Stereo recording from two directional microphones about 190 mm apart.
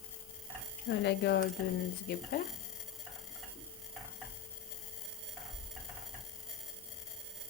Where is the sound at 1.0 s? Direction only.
65° left (ahead or behind).